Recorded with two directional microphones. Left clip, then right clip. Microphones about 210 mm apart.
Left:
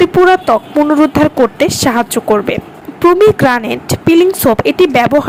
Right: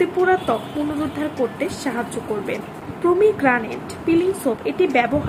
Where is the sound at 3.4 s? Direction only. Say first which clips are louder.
Left 8 dB; 50° left (ahead or behind).